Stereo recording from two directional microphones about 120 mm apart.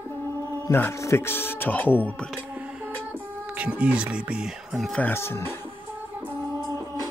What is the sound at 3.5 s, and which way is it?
Speech, 10° right (ahead or behind).